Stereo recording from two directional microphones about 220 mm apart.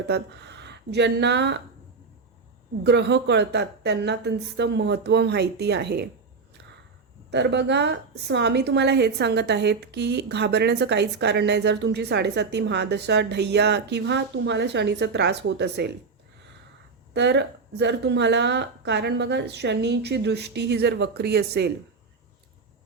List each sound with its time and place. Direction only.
0.1 s speech: 50° right (ahead or behind)
2.8 s a woman's voice: 50° right (ahead or behind)
7.3 s a woman's voice: 50° right (ahead or behind)
17.2 s a woman's voice: 50° right (ahead or behind)